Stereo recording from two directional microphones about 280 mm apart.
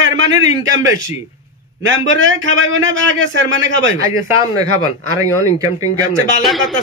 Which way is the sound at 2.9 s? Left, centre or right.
Right.